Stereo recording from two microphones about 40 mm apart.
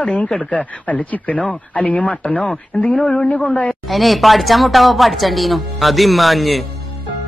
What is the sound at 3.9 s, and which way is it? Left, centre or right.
Speech, centre.